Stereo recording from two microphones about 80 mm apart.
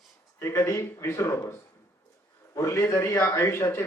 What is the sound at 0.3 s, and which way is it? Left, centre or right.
A man's voice, left.